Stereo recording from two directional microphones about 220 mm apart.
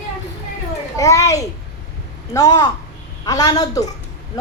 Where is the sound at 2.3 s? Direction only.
15° left (ahead or behind).